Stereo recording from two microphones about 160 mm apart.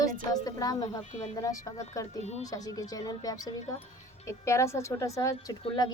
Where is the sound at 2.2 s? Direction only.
45° left (ahead or behind).